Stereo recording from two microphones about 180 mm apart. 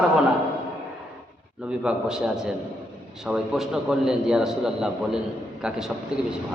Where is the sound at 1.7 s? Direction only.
5° right (ahead or behind).